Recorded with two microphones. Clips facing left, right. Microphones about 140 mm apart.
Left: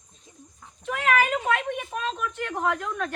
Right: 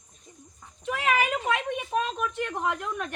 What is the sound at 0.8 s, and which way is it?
Speech, 15° right (ahead or behind).